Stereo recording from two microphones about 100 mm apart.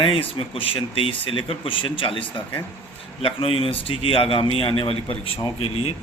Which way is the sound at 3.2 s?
70° left (ahead or behind).